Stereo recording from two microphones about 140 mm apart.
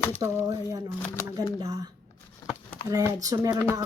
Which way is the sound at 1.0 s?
20° left (ahead or behind).